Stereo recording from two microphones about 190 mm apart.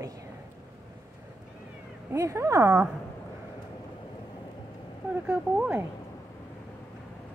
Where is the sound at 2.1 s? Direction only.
15° right (ahead or behind).